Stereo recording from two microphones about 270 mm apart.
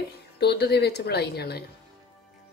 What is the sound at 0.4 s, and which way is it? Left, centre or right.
Speech, left.